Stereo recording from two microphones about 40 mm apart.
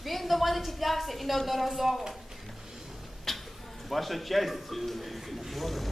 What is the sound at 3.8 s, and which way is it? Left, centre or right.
Speech, centre.